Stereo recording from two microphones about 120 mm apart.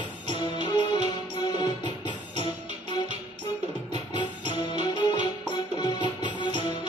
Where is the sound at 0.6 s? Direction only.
40° left (ahead or behind).